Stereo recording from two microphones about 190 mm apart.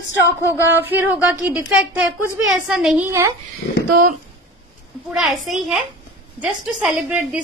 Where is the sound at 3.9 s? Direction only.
45° right (ahead or behind).